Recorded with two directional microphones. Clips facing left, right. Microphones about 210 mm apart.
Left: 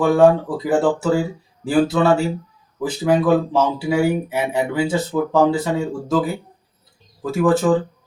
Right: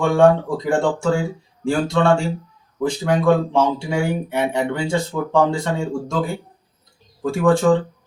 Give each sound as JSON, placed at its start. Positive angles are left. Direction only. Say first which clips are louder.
{"t": 0.0, "sound": "speech", "louder": "left 1 dB", "side_deg": 5}